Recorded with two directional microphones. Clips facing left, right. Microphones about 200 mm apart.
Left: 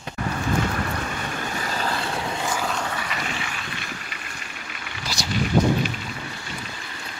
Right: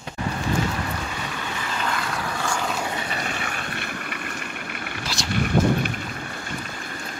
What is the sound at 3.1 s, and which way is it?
Vehicle, 45° right (ahead or behind).